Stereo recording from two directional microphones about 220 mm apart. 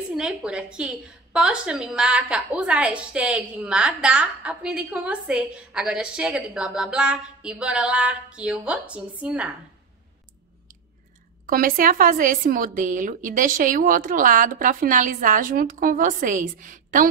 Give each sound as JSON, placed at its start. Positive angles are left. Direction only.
{"t": 0.1, "sound": "a woman's voice", "side_deg": -5}
{"t": 11.4, "sound": "speech", "side_deg": -40}